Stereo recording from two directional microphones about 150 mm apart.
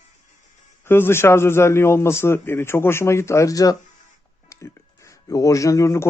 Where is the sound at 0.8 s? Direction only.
15° left (ahead or behind).